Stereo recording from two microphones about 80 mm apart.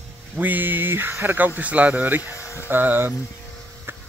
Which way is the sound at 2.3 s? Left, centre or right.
Left.